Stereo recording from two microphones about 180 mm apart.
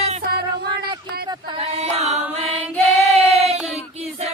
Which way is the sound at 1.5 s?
35° right (ahead or behind).